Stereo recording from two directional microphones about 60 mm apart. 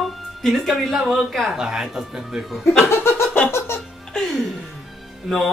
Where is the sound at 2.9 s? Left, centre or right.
Left.